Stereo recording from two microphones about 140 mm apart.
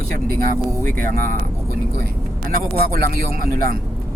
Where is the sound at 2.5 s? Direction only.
90° right.